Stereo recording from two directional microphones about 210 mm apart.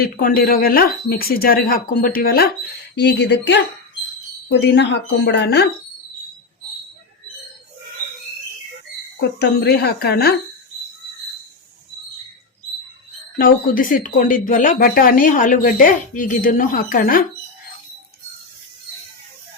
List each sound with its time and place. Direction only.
0.0 s a woman's voice: 45° left (ahead or behind)
9.4 s speech: 50° left (ahead or behind)
13.4 s speech: 40° left (ahead or behind)